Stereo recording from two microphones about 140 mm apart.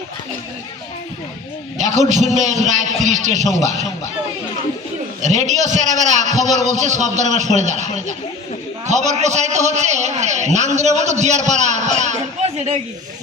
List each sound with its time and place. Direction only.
1.9 s a man's voice: 60° right (ahead or behind)
5.2 s a man's voice: 60° right (ahead or behind)